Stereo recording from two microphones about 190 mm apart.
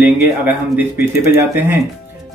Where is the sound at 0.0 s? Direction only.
10° right (ahead or behind).